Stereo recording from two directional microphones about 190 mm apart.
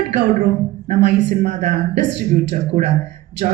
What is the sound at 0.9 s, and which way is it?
A woman's voice, 65° right (ahead or behind).